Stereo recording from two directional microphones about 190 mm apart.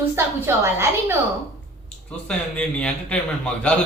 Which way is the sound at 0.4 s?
10° right (ahead or behind).